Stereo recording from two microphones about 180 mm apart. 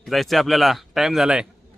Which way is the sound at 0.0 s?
Centre (ahead or behind).